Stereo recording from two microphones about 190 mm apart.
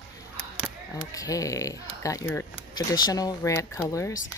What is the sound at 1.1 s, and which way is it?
Speech, 15° left (ahead or behind).